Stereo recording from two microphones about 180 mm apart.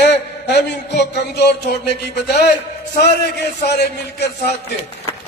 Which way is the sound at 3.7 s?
65° left (ahead or behind).